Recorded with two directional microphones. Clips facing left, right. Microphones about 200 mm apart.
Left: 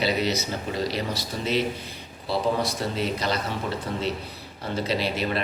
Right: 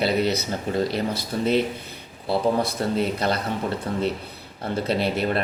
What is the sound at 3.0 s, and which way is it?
Speech, 55° right (ahead or behind).